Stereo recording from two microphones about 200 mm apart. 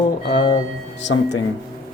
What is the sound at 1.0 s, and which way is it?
Speech, 65° left (ahead or behind).